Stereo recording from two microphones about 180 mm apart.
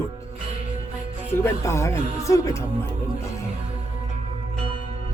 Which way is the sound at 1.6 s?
15° left (ahead or behind).